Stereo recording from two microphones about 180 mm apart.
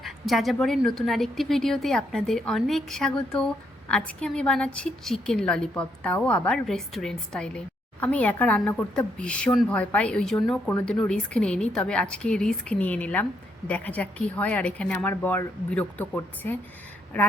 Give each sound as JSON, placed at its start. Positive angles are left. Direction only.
{"t": 0.0, "sound": "a woman's voice", "side_deg": 0}